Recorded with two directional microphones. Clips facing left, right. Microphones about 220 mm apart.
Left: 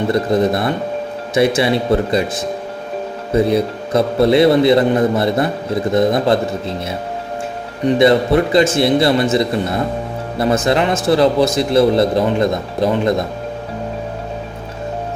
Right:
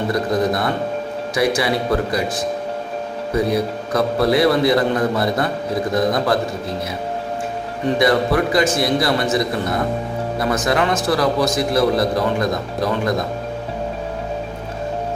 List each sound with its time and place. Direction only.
0.1 s a man's voice: 25° left (ahead or behind)
3.3 s a man's voice: 25° left (ahead or behind)
7.9 s a man's voice: 25° left (ahead or behind)